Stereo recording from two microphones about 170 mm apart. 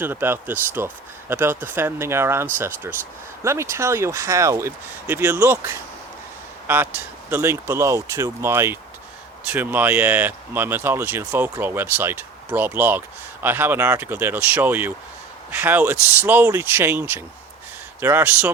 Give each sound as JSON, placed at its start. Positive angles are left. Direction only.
{"t": 0.0, "sound": "speech", "side_deg": -10}